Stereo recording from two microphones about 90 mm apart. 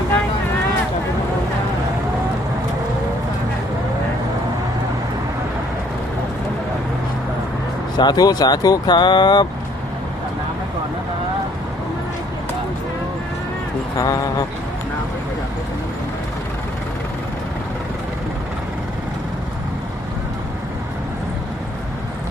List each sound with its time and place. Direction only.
7.9 s speech: 50° left (ahead or behind)
14.0 s speech: 45° left (ahead or behind)